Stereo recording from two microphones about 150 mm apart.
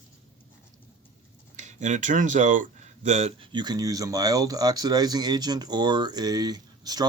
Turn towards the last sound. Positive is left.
turn(degrees=-25)  # may be behind; listen again after turning